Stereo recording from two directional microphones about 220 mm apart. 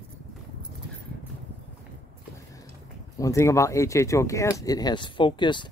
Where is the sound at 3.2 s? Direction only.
15° left (ahead or behind).